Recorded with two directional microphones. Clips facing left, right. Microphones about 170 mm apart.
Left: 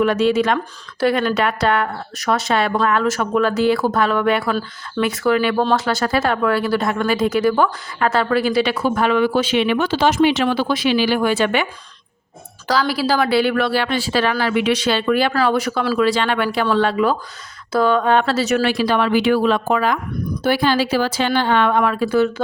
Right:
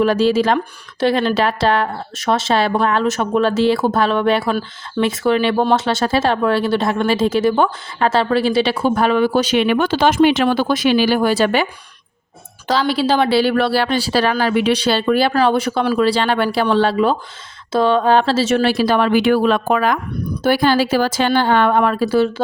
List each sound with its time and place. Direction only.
0.0 s speech: 30° right (ahead or behind)
12.6 s speech: 25° right (ahead or behind)